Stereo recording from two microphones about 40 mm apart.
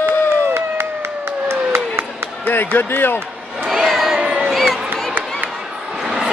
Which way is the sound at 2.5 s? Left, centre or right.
Left.